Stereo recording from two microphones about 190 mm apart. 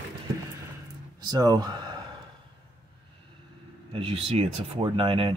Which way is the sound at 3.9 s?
30° right (ahead or behind).